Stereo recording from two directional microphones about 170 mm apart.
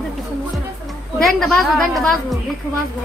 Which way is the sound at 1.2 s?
Centre (ahead or behind).